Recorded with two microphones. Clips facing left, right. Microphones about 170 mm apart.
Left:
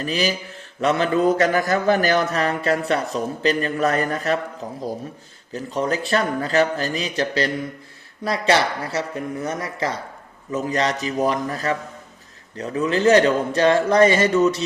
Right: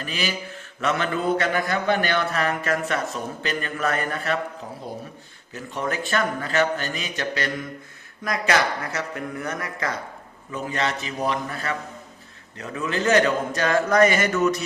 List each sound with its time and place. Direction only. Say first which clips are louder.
0.0 s mantra: left 6 dB; 35° left (ahead or behind)
1.4 s a man's voice: left 5 dB; 45° left (ahead or behind)
5.5 s a man's voice: left 5 dB; 40° left (ahead or behind)